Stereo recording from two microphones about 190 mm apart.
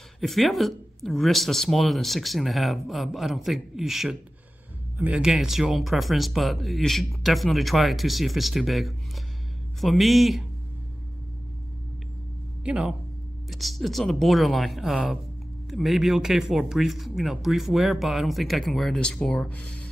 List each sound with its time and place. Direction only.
0.2 s speech: centre (ahead or behind)
12.6 s a man's voice: 5° right (ahead or behind)